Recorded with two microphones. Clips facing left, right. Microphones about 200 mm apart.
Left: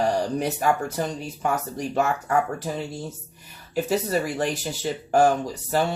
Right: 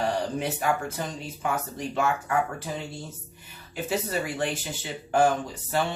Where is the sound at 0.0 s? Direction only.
40° left (ahead or behind).